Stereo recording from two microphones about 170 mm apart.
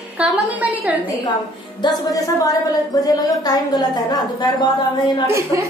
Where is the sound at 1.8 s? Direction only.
20° left (ahead or behind).